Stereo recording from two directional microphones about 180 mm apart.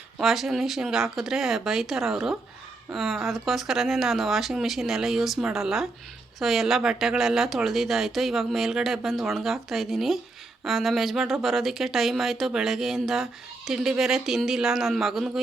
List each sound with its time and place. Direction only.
0.2 s speech: centre (ahead or behind)